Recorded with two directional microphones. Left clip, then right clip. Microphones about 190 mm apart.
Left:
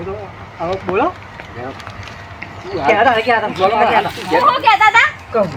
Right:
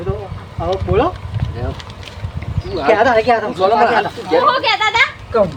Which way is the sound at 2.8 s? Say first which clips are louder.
Even; 15° right (ahead or behind).